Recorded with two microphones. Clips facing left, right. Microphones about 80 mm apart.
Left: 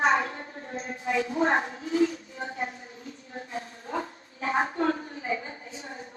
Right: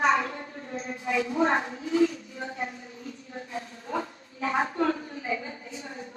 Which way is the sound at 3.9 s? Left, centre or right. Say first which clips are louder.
Right 1 dB; left.